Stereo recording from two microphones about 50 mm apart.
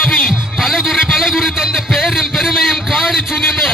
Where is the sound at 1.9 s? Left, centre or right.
Centre.